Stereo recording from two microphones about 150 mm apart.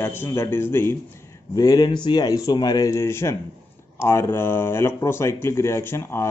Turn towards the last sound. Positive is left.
turn(degrees=15)  # may be behind; listen again after turning